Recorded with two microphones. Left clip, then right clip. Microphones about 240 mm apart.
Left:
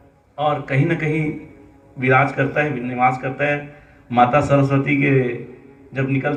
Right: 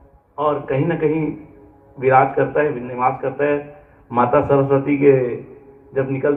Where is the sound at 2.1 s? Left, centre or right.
Left.